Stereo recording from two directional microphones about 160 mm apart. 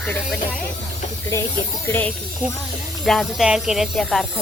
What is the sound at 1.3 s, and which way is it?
Speech, 20° left (ahead or behind).